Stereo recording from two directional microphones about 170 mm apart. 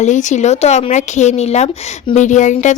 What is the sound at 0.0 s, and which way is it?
Speech, 45° left (ahead or behind).